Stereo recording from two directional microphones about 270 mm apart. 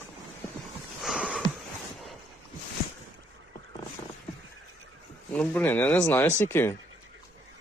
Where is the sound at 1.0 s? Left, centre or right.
Centre.